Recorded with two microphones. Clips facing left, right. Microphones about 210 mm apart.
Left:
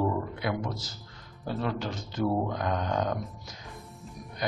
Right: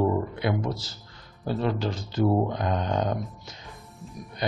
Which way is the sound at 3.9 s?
Centre (ahead or behind).